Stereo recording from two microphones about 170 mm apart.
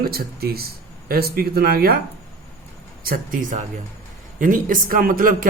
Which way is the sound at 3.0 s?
60° right (ahead or behind).